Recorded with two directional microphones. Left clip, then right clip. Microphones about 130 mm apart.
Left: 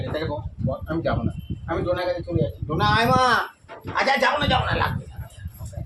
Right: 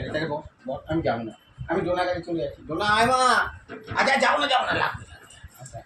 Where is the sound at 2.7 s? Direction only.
25° left (ahead or behind).